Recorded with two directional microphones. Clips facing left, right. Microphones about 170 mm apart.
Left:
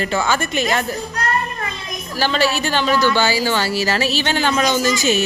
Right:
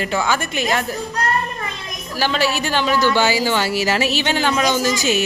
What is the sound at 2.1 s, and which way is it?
Speech, 10° right (ahead or behind).